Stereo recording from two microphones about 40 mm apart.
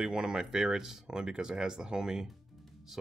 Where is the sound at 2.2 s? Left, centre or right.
Centre.